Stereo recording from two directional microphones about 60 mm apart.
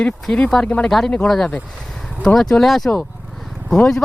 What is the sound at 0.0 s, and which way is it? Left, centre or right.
Speech, centre.